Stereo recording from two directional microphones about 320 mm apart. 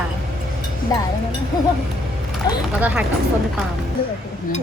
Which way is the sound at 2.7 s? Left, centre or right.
Centre.